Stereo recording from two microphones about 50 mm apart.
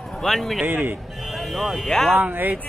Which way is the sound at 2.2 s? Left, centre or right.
Right.